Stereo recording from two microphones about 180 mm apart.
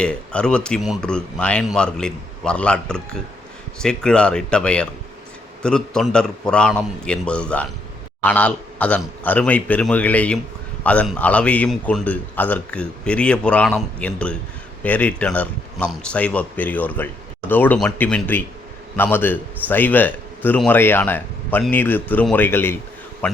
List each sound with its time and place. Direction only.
0.0 s a man's voice: 5° left (ahead or behind)